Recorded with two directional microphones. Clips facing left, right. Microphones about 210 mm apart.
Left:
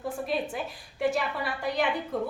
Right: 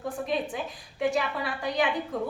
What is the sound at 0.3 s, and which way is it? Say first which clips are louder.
A woman's voice: right 1 dB; 5° left (ahead or behind).